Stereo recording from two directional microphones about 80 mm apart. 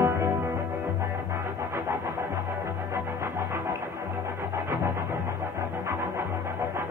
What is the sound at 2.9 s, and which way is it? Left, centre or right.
Music, right.